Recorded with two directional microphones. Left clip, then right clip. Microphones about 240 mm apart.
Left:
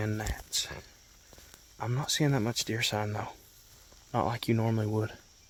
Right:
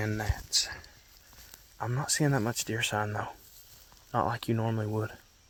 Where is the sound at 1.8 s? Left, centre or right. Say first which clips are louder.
Even; centre.